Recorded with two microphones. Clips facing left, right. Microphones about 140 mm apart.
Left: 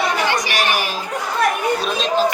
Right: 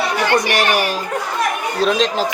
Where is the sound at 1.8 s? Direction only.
90° right.